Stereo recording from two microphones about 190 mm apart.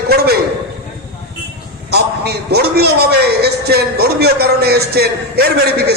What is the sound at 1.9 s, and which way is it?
A man's voice, 60° right (ahead or behind).